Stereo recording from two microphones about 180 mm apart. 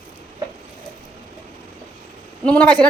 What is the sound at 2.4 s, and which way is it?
Speech, 5° left (ahead or behind).